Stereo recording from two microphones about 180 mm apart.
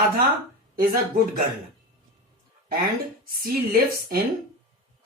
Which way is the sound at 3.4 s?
55° right (ahead or behind).